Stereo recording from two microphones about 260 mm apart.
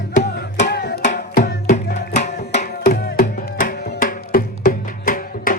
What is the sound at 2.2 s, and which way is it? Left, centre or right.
Music, left.